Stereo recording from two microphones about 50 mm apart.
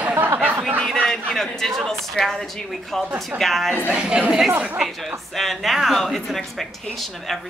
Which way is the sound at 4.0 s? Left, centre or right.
Centre.